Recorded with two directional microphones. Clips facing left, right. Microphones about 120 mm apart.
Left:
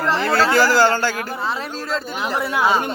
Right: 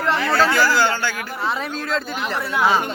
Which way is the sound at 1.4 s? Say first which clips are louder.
Right 4 dB; centre (ahead or behind).